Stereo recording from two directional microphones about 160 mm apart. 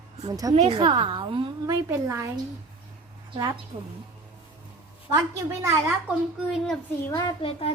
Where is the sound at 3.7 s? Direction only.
50° right (ahead or behind).